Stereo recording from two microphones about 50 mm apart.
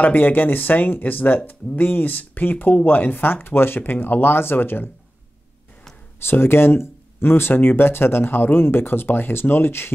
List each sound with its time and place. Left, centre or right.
0.0 s speech: left
6.1 s speech: left